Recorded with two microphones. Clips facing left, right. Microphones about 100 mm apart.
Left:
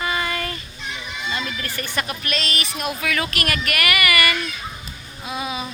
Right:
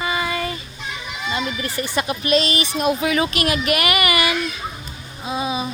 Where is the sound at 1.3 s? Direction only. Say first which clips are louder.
Right 4 dB; 20° right (ahead or behind).